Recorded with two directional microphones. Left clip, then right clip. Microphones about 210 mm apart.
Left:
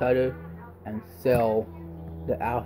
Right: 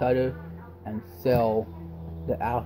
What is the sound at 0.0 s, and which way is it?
Speech, centre (ahead or behind).